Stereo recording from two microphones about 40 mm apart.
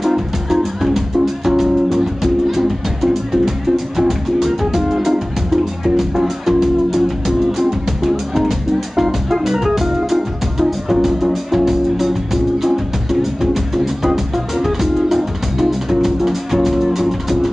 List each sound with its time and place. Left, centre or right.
0.0 s music: centre